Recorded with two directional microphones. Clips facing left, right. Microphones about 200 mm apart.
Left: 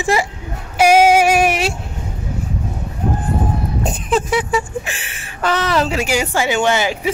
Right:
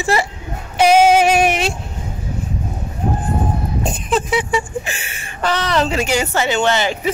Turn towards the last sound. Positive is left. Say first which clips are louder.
# even
turn(degrees=10)  # may be behind; listen again after turning